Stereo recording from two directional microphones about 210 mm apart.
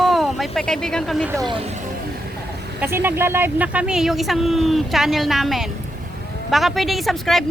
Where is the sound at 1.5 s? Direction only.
25° right (ahead or behind).